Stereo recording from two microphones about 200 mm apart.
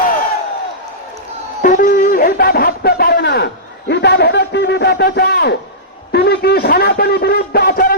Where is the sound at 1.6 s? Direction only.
40° left (ahead or behind).